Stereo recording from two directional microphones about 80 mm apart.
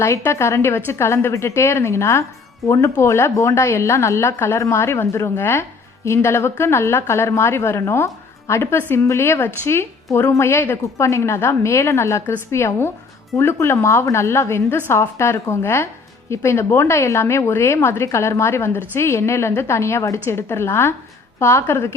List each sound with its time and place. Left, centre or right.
0.3 s speech: left